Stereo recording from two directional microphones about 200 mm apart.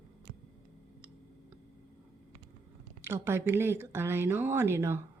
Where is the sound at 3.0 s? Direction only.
10° right (ahead or behind).